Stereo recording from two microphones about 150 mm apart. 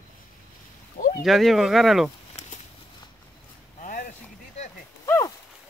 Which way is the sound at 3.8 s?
65° left (ahead or behind).